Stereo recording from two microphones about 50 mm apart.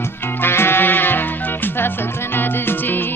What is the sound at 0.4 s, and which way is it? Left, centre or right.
Music, left.